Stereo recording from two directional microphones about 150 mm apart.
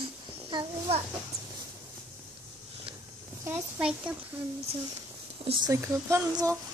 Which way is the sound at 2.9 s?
35° right (ahead or behind).